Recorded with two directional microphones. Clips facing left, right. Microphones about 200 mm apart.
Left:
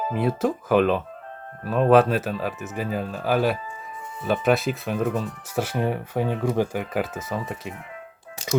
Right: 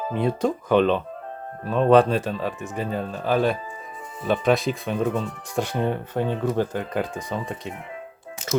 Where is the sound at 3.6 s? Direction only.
35° right (ahead or behind).